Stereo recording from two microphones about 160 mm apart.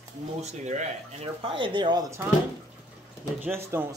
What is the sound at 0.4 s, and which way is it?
Speech, 45° right (ahead or behind).